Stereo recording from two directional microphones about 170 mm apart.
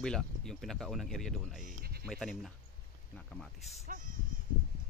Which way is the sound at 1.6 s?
65° right (ahead or behind).